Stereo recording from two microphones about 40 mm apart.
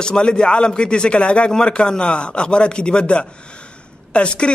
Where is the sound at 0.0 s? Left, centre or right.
Left.